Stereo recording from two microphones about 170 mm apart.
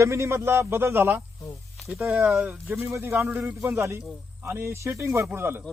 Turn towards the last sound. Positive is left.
turn(degrees=-15)  # may be behind; listen again after turning